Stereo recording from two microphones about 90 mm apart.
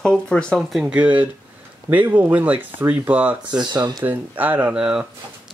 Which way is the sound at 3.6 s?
50° right (ahead or behind).